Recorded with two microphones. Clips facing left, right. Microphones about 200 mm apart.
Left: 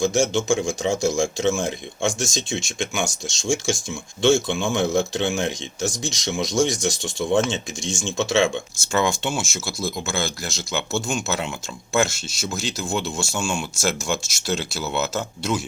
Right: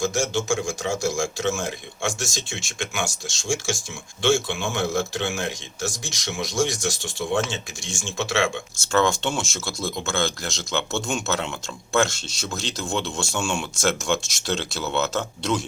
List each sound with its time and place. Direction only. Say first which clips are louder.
0.0 s speech: left 4 dB; 20° left (ahead or behind)
8.9 s speech: right 1 dB; 10° left (ahead or behind)